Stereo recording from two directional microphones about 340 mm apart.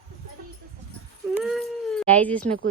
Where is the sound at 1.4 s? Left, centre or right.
Centre.